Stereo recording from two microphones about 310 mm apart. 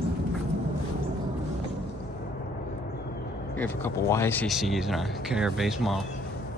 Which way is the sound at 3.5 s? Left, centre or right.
Centre.